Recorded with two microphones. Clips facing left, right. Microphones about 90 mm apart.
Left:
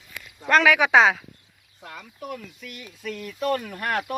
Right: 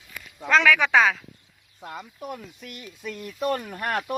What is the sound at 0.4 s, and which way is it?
Speech, 5° left (ahead or behind).